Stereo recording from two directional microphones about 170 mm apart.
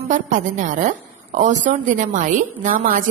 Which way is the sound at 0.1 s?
45° right (ahead or behind).